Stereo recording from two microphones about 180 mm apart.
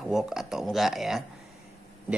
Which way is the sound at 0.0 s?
5° right (ahead or behind).